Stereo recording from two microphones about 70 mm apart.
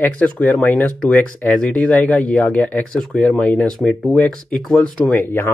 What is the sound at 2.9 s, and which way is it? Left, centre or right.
Speech, centre.